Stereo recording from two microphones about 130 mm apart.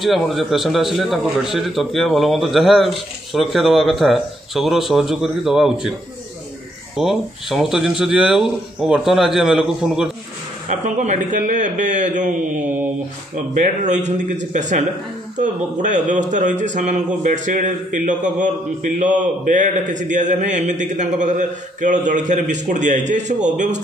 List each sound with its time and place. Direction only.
0.0 s a man's voice: centre (ahead or behind)
7.0 s a man's voice: centre (ahead or behind)
10.7 s a man's voice: 65° right (ahead or behind)
13.6 s a man's voice: 70° right (ahead or behind)